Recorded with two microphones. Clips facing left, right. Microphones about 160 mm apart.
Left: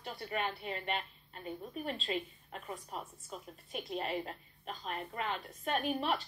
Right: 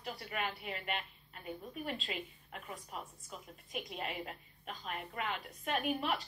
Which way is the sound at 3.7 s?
30° left (ahead or behind).